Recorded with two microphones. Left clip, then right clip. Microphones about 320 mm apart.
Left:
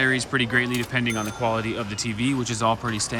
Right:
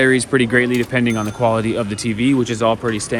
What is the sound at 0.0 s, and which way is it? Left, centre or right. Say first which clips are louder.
Speech: right 7 dB; centre.